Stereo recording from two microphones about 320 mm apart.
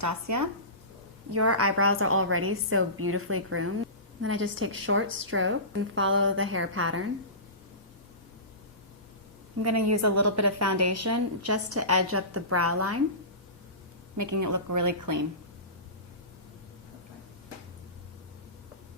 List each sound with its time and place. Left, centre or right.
0.0 s speech: right
1.3 s a woman's voice: right
9.6 s a woman's voice: right
14.2 s speech: right